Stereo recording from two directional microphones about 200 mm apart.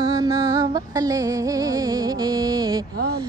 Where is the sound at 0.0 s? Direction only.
20° right (ahead or behind).